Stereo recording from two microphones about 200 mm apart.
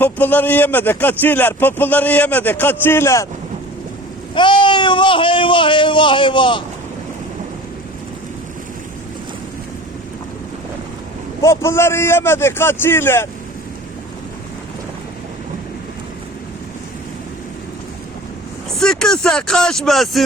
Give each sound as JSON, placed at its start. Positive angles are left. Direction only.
{"t": 0.0, "sound": "a man's voice", "side_deg": 10}
{"t": 4.4, "sound": "speech", "side_deg": 25}
{"t": 11.4, "sound": "a man's voice", "side_deg": 15}
{"t": 18.8, "sound": "speech", "side_deg": 5}